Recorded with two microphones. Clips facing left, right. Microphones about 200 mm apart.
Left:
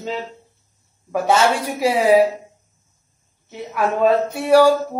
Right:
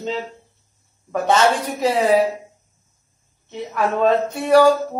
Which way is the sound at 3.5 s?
5° left (ahead or behind).